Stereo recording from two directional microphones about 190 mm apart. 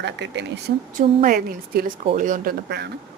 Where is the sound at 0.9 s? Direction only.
45° right (ahead or behind).